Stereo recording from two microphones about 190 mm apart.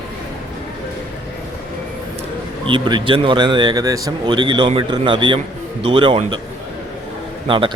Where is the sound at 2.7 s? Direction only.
25° right (ahead or behind).